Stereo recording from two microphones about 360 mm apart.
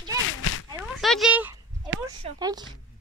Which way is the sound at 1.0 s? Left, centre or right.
Centre.